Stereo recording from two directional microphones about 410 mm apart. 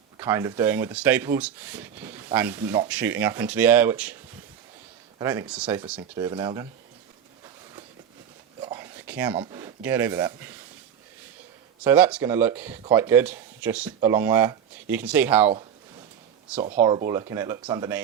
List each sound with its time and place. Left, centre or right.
0.2 s speech: centre
5.2 s speech: centre
8.6 s a sound: centre
11.8 s speech: centre
16.6 s speech: centre